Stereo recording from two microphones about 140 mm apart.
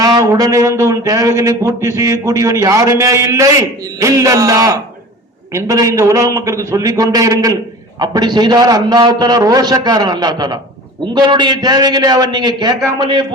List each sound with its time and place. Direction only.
0.0 s a man's voice: 25° right (ahead or behind)